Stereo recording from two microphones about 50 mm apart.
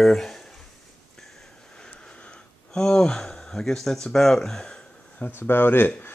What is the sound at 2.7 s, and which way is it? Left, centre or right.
Speech, centre.